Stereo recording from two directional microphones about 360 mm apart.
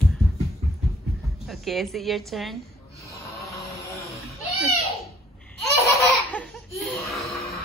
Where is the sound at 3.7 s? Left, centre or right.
Centre.